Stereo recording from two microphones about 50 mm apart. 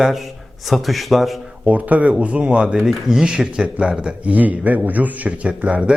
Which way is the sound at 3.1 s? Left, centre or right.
Centre.